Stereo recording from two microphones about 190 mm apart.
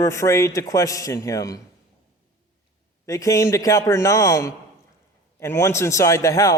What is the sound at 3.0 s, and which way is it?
A man's voice, 15° left (ahead or behind).